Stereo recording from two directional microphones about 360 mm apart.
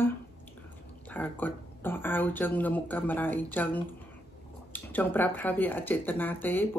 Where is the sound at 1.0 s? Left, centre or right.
Centre.